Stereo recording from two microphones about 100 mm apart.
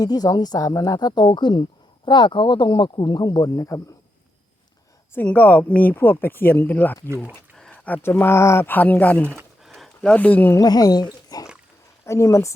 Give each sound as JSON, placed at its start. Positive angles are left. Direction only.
{"t": 0.0, "sound": "speech", "side_deg": 40}
{"t": 5.1, "sound": "speech", "side_deg": 15}
{"t": 9.2, "sound": "speech", "side_deg": -25}
{"t": 9.6, "sound": "a sound", "side_deg": 0}
{"t": 10.6, "sound": "speech", "side_deg": 40}
{"t": 12.0, "sound": "speech", "side_deg": 30}